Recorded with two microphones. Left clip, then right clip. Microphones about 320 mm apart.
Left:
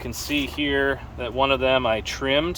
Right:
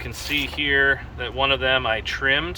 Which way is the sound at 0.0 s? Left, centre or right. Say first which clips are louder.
Right 1 dB; left.